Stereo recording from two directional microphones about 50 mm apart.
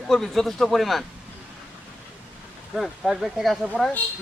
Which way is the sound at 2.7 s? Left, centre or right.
Centre.